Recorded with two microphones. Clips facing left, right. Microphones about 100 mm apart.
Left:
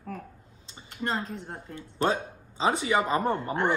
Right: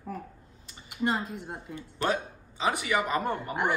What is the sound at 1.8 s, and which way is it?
Speech, 30° left (ahead or behind).